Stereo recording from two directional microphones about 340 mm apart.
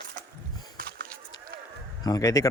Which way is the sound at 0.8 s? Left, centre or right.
Right.